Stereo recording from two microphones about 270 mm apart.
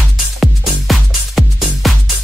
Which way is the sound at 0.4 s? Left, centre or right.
Centre.